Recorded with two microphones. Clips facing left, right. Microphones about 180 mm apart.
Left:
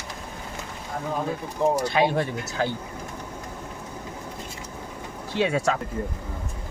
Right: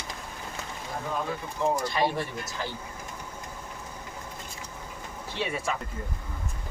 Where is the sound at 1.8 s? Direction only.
70° left (ahead or behind).